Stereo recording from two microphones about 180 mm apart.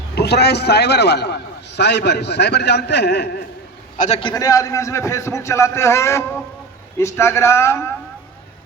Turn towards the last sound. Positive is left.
turn(degrees=15)  # may be behind; listen again after turning